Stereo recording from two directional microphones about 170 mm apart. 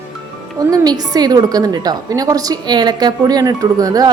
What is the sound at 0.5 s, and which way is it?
A woman's voice, 20° right (ahead or behind).